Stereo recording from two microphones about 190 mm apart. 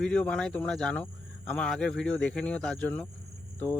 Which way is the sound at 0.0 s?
5° left (ahead or behind).